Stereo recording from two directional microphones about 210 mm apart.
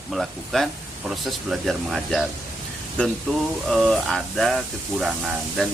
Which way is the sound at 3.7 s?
Centre (ahead or behind).